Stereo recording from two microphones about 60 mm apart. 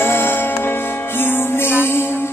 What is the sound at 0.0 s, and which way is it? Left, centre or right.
Music, left.